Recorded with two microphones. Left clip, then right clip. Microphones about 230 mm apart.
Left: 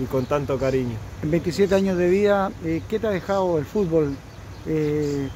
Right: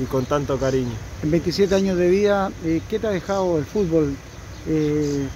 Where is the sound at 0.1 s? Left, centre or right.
Centre.